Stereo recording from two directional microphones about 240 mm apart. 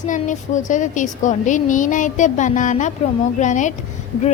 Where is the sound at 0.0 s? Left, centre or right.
Left.